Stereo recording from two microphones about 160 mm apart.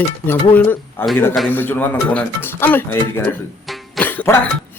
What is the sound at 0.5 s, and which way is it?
Speech, 10° left (ahead or behind).